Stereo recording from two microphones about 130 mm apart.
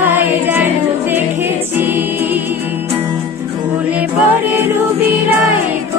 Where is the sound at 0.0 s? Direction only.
15° right (ahead or behind).